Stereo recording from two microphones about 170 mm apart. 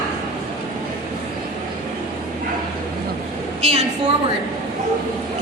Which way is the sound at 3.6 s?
35° right (ahead or behind).